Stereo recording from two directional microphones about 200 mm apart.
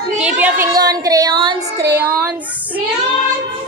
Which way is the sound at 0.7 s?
20° right (ahead or behind).